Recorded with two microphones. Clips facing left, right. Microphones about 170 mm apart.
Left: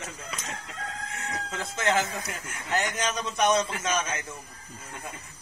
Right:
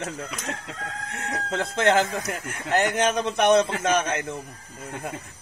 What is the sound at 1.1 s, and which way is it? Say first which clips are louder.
Speech: right 8 dB; 65° right (ahead or behind).